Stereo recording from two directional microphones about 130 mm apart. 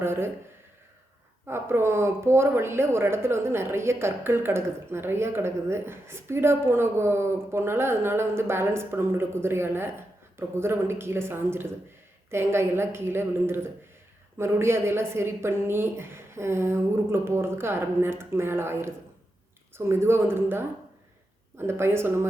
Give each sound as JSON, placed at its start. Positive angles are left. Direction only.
{"t": 0.0, "sound": "speech", "side_deg": -20}
{"t": 1.5, "sound": "speech", "side_deg": -20}
{"t": 21.7, "sound": "speech", "side_deg": -20}